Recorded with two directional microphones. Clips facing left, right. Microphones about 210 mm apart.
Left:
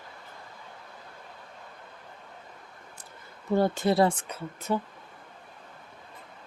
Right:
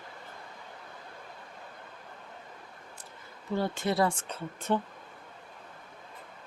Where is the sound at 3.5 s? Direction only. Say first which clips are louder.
Left 6 dB; 50° left (ahead or behind).